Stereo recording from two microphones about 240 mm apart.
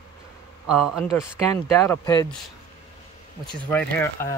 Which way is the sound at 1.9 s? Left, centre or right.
Centre.